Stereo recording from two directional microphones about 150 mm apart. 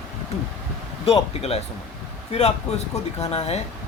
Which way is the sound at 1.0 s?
40° left (ahead or behind).